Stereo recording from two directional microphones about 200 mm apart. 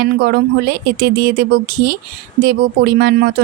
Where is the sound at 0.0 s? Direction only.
55° right (ahead or behind).